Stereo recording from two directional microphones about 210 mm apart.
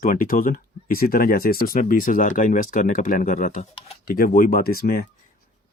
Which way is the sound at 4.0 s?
45° left (ahead or behind).